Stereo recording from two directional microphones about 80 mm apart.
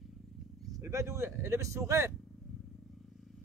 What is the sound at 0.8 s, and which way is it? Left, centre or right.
Speech, right.